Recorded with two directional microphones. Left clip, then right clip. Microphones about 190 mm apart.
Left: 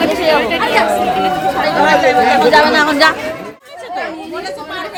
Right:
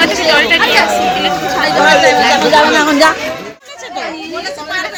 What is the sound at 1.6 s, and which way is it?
Speech, 55° right (ahead or behind).